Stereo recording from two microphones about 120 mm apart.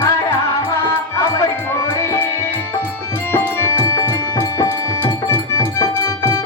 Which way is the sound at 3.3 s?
25° left (ahead or behind).